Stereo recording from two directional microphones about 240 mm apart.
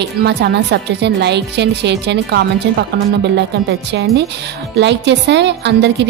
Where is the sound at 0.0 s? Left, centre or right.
Right.